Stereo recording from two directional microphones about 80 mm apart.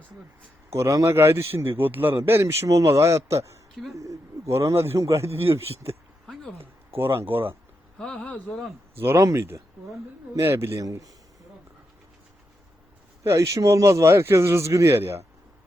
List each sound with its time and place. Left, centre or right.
0.7 s a man's voice: right
6.3 s a sound: centre
6.9 s speech: right
7.9 s speech: centre
9.0 s a man's voice: right
10.8 s speech: right
13.2 s a man's voice: right